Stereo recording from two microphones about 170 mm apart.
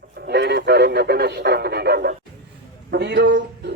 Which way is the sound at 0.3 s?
75° right (ahead or behind).